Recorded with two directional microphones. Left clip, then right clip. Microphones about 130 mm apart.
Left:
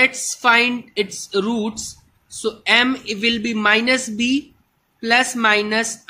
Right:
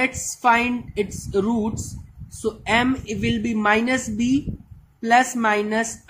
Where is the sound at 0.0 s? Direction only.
5° left (ahead or behind).